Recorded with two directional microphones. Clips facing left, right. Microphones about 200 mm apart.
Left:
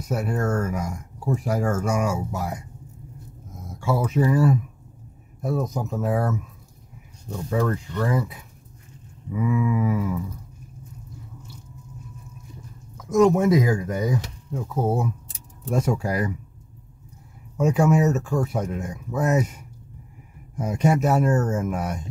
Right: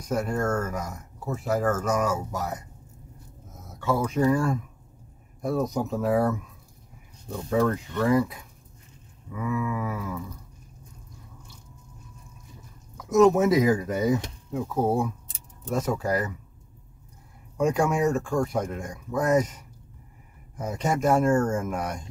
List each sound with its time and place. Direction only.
0.0 s speech: 5° left (ahead or behind)
3.8 s speech: 5° left (ahead or behind)
7.4 s speech: centre (ahead or behind)
9.3 s speech: 15° left (ahead or behind)
12.9 s speech: centre (ahead or behind)
17.6 s speech: 5° left (ahead or behind)